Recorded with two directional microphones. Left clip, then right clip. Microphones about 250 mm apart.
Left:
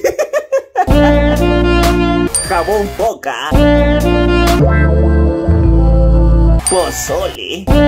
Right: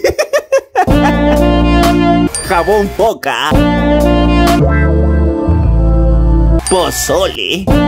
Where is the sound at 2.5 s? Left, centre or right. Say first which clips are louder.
Right 4 dB; right.